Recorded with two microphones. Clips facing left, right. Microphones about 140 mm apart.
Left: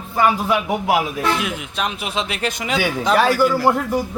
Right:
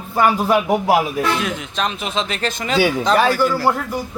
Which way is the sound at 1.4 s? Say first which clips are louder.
Right 2 dB; 10° left (ahead or behind).